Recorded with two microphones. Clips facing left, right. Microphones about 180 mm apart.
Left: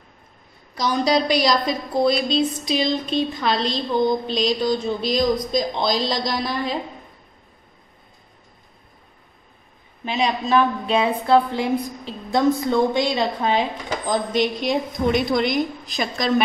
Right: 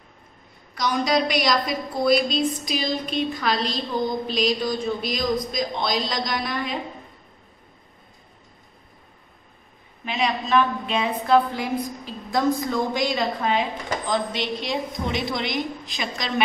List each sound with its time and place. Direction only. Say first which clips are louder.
0.7 s a woman's voice: left 2 dB; 30° left (ahead or behind)
10.0 s a woman's voice: left 3 dB; 35° left (ahead or behind)
14.1 s a woman's voice: left 6 dB; 50° left (ahead or behind)